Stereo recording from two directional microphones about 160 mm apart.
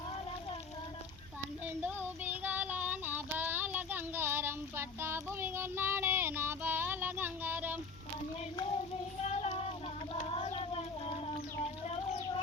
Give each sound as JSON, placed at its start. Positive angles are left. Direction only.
{"t": 1.8, "sound": "child singing", "side_deg": -10}
{"t": 9.2, "sound": "child singing", "side_deg": 40}
{"t": 10.2, "sound": "cat", "side_deg": 40}